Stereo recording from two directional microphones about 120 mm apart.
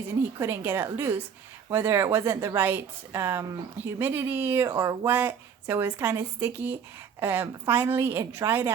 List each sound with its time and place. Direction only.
0.3 s a woman's voice: 20° right (ahead or behind)